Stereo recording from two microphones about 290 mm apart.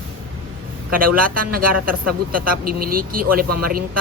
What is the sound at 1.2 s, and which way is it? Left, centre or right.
A man's voice, right.